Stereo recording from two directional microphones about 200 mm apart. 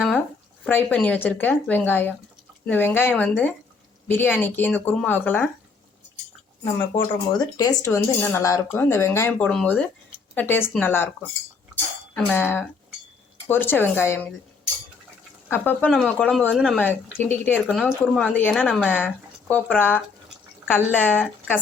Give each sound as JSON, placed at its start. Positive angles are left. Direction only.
{"t": 0.6, "sound": "a woman's voice", "side_deg": 10}
{"t": 6.9, "sound": "a woman's voice", "side_deg": 20}
{"t": 15.4, "sound": "a woman's voice", "side_deg": 10}